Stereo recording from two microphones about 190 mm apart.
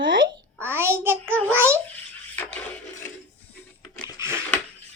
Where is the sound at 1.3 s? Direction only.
5° left (ahead or behind).